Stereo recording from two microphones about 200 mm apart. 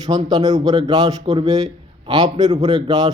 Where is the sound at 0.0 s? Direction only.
20° right (ahead or behind).